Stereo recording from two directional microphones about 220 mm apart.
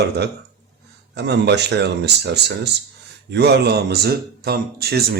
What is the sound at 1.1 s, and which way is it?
Speech, 50° right (ahead or behind).